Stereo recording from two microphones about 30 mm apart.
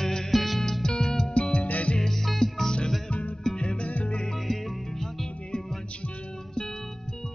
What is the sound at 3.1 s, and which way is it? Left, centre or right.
Music, left.